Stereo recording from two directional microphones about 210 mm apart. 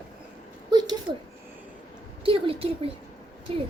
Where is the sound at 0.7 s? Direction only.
20° right (ahead or behind).